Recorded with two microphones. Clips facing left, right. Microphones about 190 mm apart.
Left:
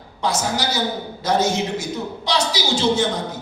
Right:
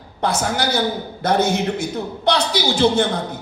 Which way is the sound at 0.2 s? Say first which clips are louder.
Right 2 dB; 55° right (ahead or behind).